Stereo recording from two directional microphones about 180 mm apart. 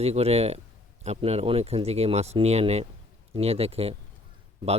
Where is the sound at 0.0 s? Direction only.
35° right (ahead or behind).